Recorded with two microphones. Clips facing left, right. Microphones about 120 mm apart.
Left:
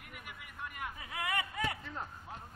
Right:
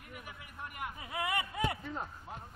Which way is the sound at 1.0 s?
20° right (ahead or behind).